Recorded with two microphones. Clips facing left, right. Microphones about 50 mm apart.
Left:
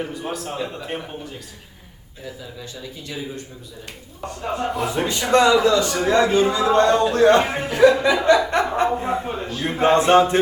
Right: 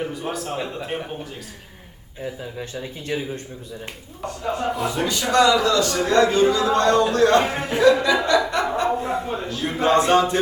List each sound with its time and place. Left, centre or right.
0.0 s a man's voice: centre
2.2 s speech: right
4.9 s a man's voice: left
6.5 s speech: left